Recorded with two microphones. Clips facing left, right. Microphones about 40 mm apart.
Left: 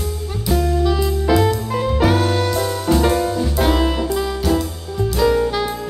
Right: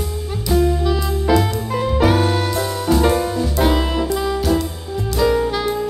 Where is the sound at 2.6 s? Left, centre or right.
Centre.